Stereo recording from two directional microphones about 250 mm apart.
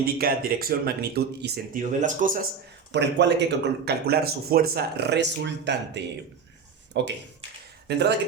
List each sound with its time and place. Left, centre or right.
0.0 s speech: right
2.9 s speech: right